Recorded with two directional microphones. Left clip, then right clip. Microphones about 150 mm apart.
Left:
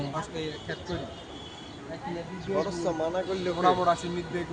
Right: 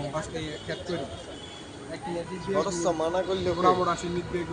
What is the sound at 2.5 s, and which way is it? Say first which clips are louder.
A man's voice: right 2 dB; 5° right (ahead or behind).